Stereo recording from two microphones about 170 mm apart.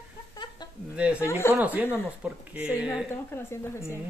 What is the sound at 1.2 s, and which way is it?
Speech, 15° left (ahead or behind).